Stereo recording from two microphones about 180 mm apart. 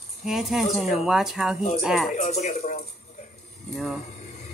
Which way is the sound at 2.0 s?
40° left (ahead or behind).